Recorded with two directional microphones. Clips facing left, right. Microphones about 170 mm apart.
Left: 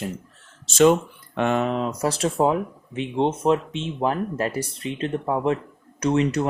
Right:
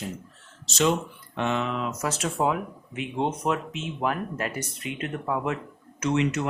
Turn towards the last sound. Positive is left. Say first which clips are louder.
# left 4 dB
turn(degrees=35)  # may be behind; listen again after turning